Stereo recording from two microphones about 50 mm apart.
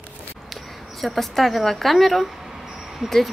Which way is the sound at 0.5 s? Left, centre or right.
Centre.